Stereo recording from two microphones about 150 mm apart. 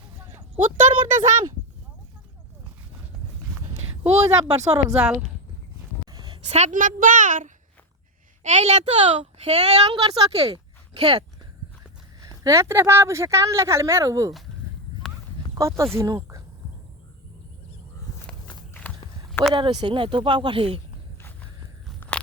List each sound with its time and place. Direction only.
0.9 s speech: 35° right (ahead or behind)
4.2 s speech: 20° right (ahead or behind)
4.9 s speech: 5° right (ahead or behind)
6.1 s a sound: 30° right (ahead or behind)
6.5 s a child's voice: 55° right (ahead or behind); by 10.6 s 40° right (ahead or behind)
12.2 s speech: 20° right (ahead or behind)
15.5 s speech: 20° right (ahead or behind)
18.3 s walk: 10° left (ahead or behind)
19.3 s a sound: centre (ahead or behind)
19.5 s speech: 35° right (ahead or behind)